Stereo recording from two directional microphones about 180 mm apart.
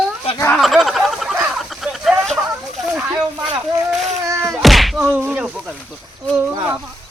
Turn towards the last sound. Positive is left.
turn(degrees=-20)  # may be behind; listen again after turning